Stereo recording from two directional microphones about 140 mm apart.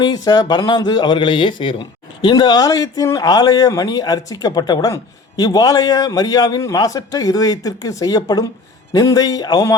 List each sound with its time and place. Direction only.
0.0 s speech: 30° left (ahead or behind)